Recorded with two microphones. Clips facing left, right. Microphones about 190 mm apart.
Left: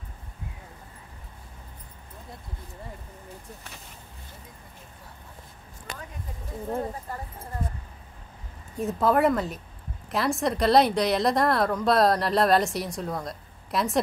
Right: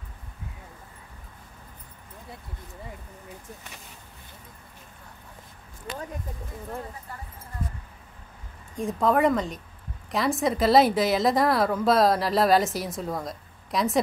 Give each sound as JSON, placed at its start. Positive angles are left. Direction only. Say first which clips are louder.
{"t": 5.9, "sound": "speech", "louder": "right 5 dB", "side_deg": 45}
{"t": 8.7, "sound": "a woman's voice", "louder": "even", "side_deg": 5}